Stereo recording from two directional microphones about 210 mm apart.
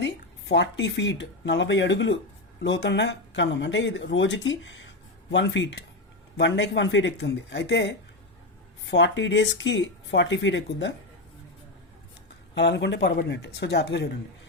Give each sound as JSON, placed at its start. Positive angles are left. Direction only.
{"t": 0.0, "sound": "speech", "side_deg": 55}
{"t": 12.5, "sound": "speech", "side_deg": 55}